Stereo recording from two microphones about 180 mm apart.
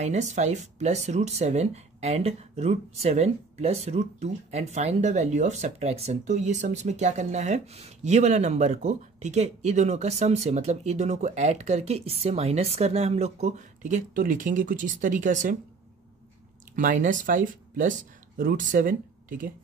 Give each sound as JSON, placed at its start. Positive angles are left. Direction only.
{"t": 0.0, "sound": "speech", "side_deg": -40}
{"t": 16.7, "sound": "speech", "side_deg": -45}